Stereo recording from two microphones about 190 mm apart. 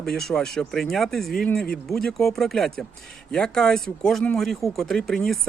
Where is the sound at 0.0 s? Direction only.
5° left (ahead or behind).